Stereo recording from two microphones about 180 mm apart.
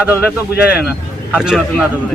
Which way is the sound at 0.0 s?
5° right (ahead or behind).